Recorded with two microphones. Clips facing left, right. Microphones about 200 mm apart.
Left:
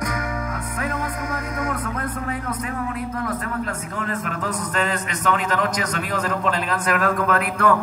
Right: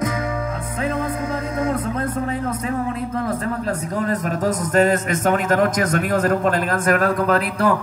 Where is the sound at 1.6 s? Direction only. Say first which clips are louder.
Right 5 dB; 25° right (ahead or behind).